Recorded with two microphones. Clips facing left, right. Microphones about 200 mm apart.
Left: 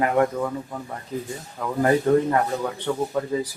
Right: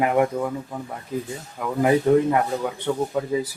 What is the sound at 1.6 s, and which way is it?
Speech, 10° right (ahead or behind).